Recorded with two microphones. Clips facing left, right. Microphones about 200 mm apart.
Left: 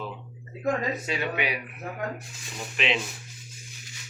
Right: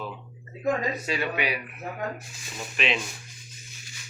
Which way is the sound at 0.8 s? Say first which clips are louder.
Right 1 dB; 20° left (ahead or behind).